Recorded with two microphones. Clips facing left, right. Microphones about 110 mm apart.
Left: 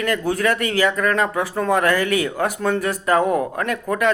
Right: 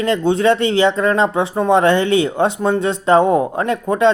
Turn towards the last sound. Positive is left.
turn(degrees=-25)  # may be behind; listen again after turning